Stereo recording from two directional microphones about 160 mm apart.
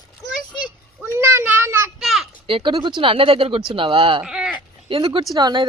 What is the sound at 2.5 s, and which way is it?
Speech, 30° right (ahead or behind).